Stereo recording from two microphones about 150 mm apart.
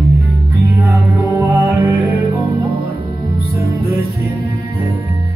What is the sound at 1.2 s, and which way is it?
Music, 20° right (ahead or behind).